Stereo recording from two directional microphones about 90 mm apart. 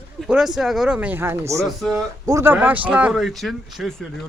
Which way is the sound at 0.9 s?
20° right (ahead or behind).